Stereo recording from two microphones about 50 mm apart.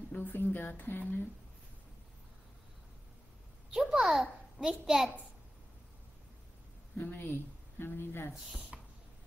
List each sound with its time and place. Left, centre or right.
0.2 s speech: left
3.7 s a child's voice: centre
7.0 s speech: left
8.7 s rodents: right